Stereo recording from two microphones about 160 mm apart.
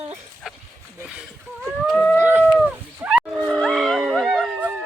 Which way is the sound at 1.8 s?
5° left (ahead or behind).